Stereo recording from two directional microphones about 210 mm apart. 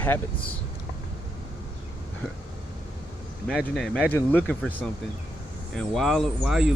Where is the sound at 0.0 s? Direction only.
10° left (ahead or behind).